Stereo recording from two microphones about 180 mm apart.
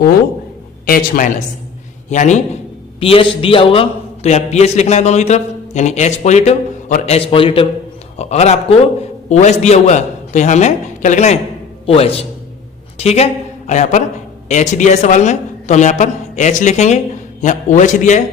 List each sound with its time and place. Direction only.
0.9 s a man's voice: 50° left (ahead or behind)
2.0 s a man's voice: 40° left (ahead or behind)
3.0 s a man's voice: 30° left (ahead or behind)